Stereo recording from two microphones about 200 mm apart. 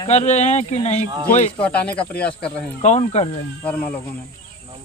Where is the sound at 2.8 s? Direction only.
35° left (ahead or behind).